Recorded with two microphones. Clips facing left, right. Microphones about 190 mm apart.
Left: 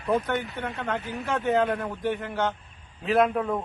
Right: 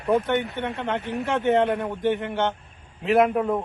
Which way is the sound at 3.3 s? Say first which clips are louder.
Right 4 dB; 5° right (ahead or behind).